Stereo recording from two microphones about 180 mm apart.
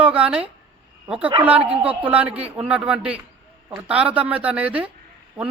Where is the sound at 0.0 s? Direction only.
5° right (ahead or behind).